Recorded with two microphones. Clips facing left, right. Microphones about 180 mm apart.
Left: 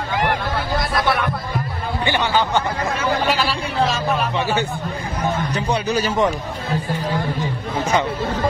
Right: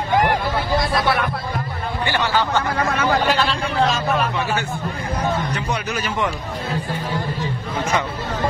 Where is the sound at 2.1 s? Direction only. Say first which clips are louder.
Left 1 dB; 20° left (ahead or behind).